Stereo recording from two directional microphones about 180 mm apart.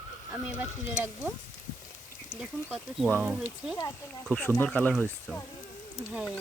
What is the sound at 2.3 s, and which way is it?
Speech, 5° right (ahead or behind).